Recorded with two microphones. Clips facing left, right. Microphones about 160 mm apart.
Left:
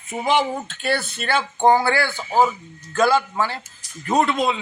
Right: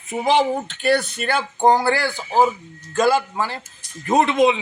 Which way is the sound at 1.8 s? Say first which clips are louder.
Right 1 dB; 15° right (ahead or behind).